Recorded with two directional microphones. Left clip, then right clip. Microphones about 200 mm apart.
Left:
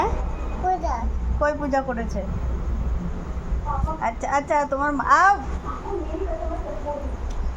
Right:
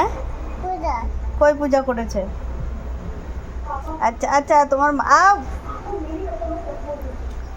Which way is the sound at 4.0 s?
40° right (ahead or behind).